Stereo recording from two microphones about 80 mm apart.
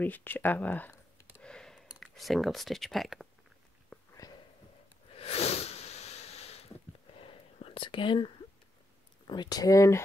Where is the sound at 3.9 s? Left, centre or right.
Centre.